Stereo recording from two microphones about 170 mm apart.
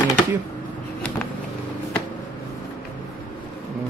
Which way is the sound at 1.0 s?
5° left (ahead or behind).